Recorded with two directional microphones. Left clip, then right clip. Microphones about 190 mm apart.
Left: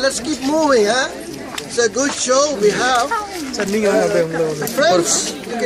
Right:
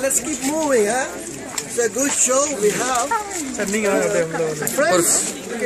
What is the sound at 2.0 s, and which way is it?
A man's voice, 5° right (ahead or behind).